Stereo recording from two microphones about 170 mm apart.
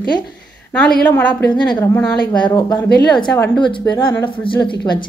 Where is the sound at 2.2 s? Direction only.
25° left (ahead or behind).